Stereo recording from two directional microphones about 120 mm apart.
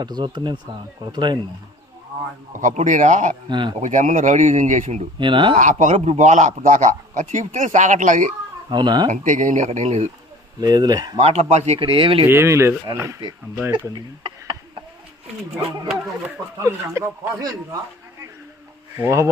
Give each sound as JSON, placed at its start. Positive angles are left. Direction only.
{"t": 0.0, "sound": "speech", "side_deg": -40}
{"t": 2.6, "sound": "a man's voice", "side_deg": -90}
{"t": 3.5, "sound": "speech", "side_deg": -40}
{"t": 3.8, "sound": "a man's voice", "side_deg": -90}
{"t": 5.2, "sound": "speech", "side_deg": -40}
{"t": 5.5, "sound": "a man's voice", "side_deg": -90}
{"t": 8.7, "sound": "speech", "side_deg": -40}
{"t": 9.0, "sound": "a man's voice", "side_deg": -90}
{"t": 10.6, "sound": "speech", "side_deg": -35}
{"t": 11.2, "sound": "speech", "side_deg": -60}
{"t": 11.8, "sound": "speech", "side_deg": -45}
{"t": 12.2, "sound": "speech", "side_deg": -20}
{"t": 16.6, "sound": "speech", "side_deg": -25}
{"t": 18.9, "sound": "speech", "side_deg": -20}